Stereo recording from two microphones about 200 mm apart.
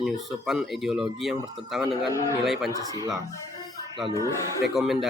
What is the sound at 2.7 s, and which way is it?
Speech, 15° right (ahead or behind).